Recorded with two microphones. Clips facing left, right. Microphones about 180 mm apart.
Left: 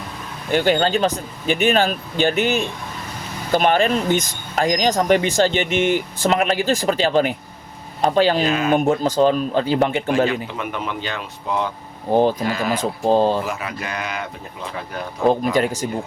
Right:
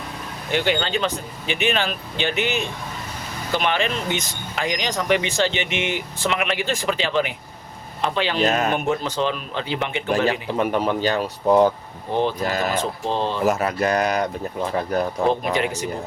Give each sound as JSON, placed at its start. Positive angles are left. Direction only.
{"t": 0.5, "sound": "speech", "side_deg": 45}
{"t": 8.4, "sound": "speech", "side_deg": -40}
{"t": 8.7, "sound": "speech", "side_deg": 40}
{"t": 10.6, "sound": "speech", "side_deg": -35}
{"t": 12.1, "sound": "speech", "side_deg": 40}
{"t": 12.5, "sound": "speech", "side_deg": -45}
{"t": 12.7, "sound": "speech", "side_deg": 40}
{"t": 13.4, "sound": "speech", "side_deg": -40}
{"t": 15.3, "sound": "speech", "side_deg": 40}